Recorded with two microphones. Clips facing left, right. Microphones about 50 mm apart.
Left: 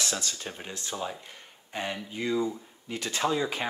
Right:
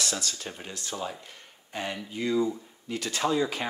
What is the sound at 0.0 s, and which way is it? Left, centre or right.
Speech, left.